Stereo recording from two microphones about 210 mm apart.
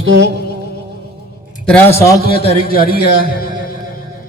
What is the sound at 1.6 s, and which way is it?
Speech, 10° left (ahead or behind).